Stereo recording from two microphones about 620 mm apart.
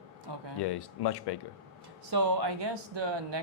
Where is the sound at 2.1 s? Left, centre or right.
Right.